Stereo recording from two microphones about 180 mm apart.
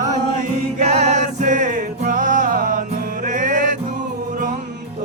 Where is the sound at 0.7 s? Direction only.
35° right (ahead or behind).